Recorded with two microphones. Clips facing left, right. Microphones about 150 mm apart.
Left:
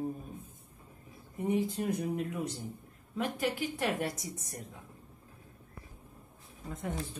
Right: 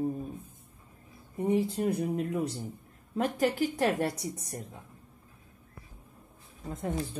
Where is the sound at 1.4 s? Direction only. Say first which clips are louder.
Right 4 dB; 30° right (ahead or behind).